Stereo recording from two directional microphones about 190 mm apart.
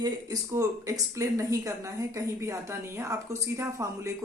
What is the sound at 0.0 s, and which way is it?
Speech, 20° right (ahead or behind).